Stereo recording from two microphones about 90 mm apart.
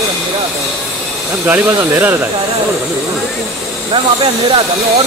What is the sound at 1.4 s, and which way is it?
Speech, 25° right (ahead or behind).